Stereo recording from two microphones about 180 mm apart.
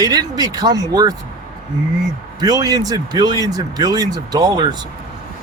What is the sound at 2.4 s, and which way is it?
Speech, 20° right (ahead or behind).